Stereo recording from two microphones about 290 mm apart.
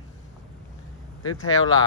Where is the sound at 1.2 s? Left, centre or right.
Left.